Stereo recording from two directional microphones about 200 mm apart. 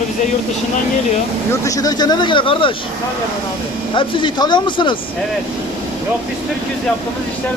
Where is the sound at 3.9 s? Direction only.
25° left (ahead or behind).